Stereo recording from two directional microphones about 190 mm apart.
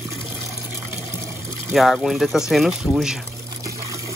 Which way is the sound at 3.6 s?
15° right (ahead or behind).